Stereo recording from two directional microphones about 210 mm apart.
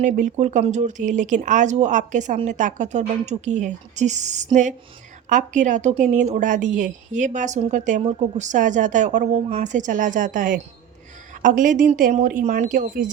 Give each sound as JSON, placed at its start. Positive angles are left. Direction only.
{"t": 0.0, "sound": "speech", "side_deg": -35}